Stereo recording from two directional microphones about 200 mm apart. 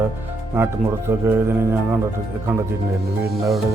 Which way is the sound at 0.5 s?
15° right (ahead or behind).